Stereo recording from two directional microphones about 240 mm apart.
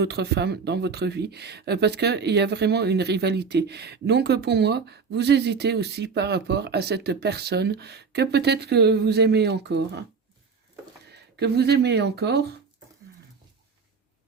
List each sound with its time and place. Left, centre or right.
0.0 s speech: right
11.1 s speech: right